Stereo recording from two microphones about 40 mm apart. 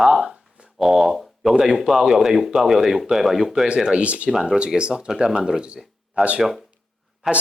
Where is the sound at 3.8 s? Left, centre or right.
Right.